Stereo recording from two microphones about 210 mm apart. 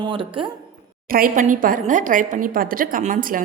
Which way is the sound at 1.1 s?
40° right (ahead or behind).